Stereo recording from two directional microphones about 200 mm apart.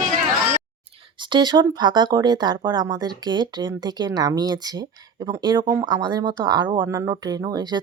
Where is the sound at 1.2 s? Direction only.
20° right (ahead or behind).